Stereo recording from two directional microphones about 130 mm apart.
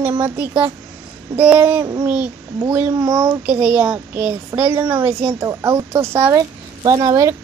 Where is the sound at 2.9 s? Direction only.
25° right (ahead or behind).